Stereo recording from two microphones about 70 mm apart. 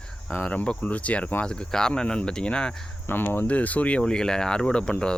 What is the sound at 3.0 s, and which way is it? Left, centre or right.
Speech, left.